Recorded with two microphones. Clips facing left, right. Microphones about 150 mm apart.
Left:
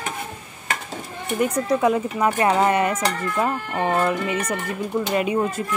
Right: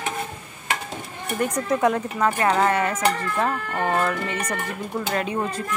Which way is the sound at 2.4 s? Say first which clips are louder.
Left 3 dB; 20° left (ahead or behind).